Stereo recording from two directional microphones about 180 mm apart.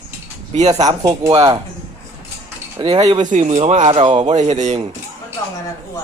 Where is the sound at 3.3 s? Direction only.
40° right (ahead or behind).